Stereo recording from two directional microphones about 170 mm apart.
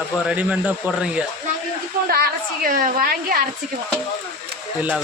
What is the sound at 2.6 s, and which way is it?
Speech, 55° right (ahead or behind).